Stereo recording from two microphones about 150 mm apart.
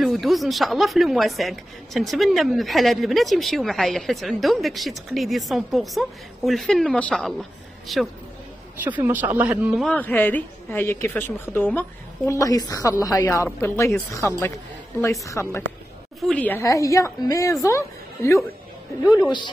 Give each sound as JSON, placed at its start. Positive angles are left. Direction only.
{"t": 0.0, "sound": "speech", "side_deg": 0}
{"t": 8.7, "sound": "speech", "side_deg": -15}
{"t": 9.8, "sound": "a woman's voice", "side_deg": 10}
{"t": 12.3, "sound": "a woman's voice", "side_deg": 25}
{"t": 16.2, "sound": "speech", "side_deg": 0}
{"t": 16.4, "sound": "a woman's voice", "side_deg": 20}
{"t": 19.0, "sound": "speech", "side_deg": -10}